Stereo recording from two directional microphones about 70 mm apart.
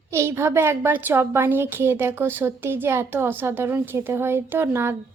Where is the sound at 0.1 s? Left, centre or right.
Right.